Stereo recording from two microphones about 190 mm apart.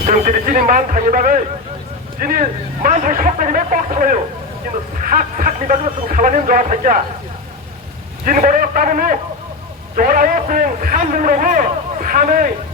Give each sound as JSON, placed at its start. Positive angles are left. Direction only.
{"t": 0.0, "sound": "a man's voice", "side_deg": -45}
{"t": 8.2, "sound": "a man's voice", "side_deg": -45}